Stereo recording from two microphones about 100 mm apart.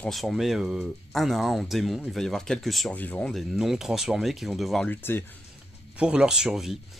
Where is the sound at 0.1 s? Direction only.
Centre (ahead or behind).